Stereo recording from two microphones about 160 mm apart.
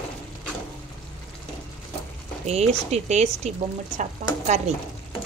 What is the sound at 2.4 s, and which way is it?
Speech, 45° right (ahead or behind).